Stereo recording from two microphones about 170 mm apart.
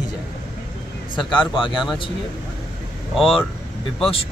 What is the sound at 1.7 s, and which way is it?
Speech, centre (ahead or behind).